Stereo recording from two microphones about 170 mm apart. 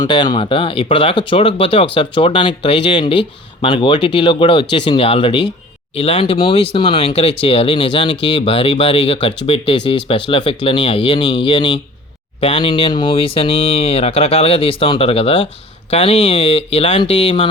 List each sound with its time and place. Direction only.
0.0 s speech: 25° left (ahead or behind)